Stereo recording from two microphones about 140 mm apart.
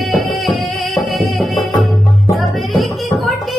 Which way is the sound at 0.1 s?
Centre (ahead or behind).